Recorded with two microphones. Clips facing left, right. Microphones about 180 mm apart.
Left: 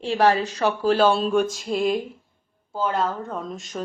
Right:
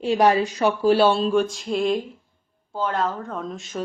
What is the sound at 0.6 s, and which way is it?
Speech, 10° right (ahead or behind).